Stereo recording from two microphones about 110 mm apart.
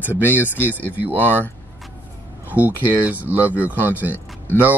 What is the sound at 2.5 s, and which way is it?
Speech, 15° right (ahead or behind).